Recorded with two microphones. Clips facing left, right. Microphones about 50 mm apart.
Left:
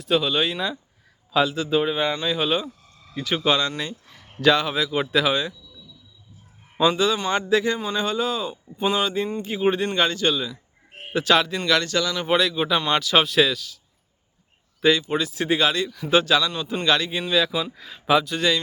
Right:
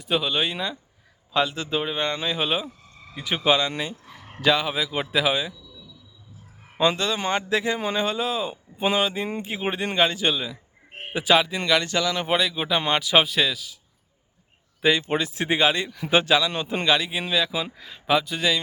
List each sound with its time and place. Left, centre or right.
0.0 s speech: centre
6.7 s speech: centre
12.8 s speech: centre
13.2 s speech: centre
14.8 s speech: centre
15.1 s speech: right
16.5 s a man's voice: right
16.8 s speech: centre